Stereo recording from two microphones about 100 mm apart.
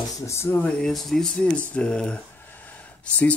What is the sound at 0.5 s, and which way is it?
Speech, 10° left (ahead or behind).